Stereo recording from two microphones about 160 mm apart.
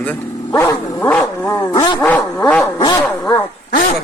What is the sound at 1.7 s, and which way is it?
Speech, 30° left (ahead or behind).